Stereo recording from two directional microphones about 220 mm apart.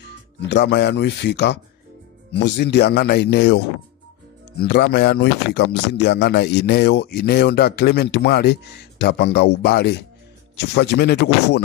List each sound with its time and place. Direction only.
0.5 s speech: 50° left (ahead or behind)